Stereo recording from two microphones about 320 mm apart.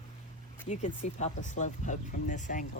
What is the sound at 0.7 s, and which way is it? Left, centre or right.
Speech, left.